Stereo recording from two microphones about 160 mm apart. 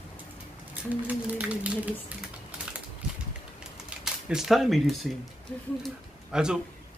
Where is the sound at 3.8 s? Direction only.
5° right (ahead or behind).